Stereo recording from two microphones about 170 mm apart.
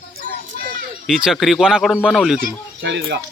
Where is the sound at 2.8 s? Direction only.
85° right.